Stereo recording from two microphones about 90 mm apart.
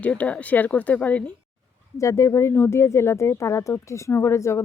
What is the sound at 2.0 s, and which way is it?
A woman's voice, 35° left (ahead or behind).